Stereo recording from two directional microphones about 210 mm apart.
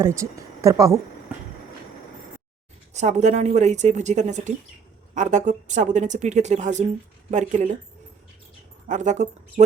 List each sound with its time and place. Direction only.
0.0 s speech: 15° right (ahead or behind)
2.9 s speech: 35° right (ahead or behind)
8.9 s speech: 35° right (ahead or behind)